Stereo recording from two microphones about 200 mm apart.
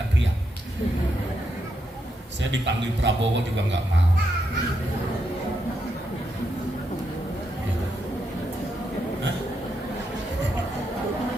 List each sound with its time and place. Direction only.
2.4 s a man's voice: 60° right (ahead or behind)